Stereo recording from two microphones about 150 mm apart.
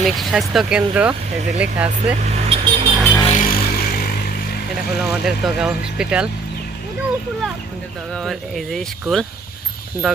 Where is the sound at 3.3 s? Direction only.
75° left (ahead or behind); by 4.1 s 90° left.